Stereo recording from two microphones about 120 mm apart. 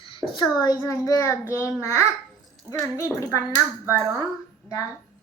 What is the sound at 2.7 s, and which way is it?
Speech, 10° left (ahead or behind).